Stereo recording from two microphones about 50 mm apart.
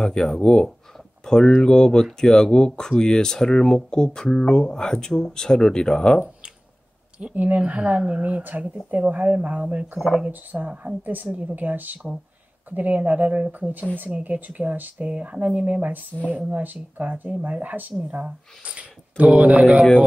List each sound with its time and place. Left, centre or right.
0.4 s speech: centre
7.3 s speech: right
9.9 s speech: centre
10.5 s speech: right
19.6 s speech: centre